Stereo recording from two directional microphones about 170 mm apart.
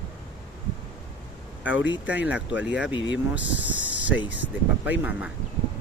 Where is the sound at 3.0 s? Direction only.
90° left.